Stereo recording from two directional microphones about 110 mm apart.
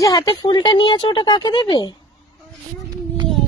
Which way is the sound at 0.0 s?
40° left (ahead or behind).